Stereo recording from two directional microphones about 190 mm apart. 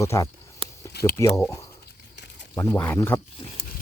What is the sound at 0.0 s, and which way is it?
Speech, 15° left (ahead or behind).